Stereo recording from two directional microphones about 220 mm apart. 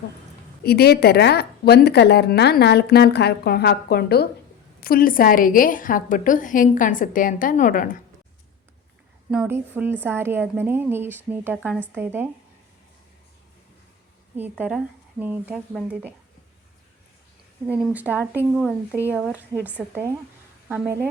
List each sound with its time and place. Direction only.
0.6 s a woman's voice: 45° left (ahead or behind)
9.3 s a woman's voice: 5° right (ahead or behind)
14.3 s a woman's voice: 10° right (ahead or behind)
17.7 s a woman's voice: 5° right (ahead or behind)